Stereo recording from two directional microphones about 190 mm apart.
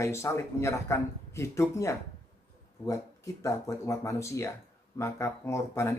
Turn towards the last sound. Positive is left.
turn(degrees=15)  # may be behind; listen again after turning